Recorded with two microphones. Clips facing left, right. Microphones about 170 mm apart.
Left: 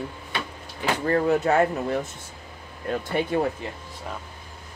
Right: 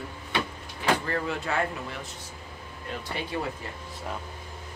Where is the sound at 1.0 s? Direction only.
40° left (ahead or behind).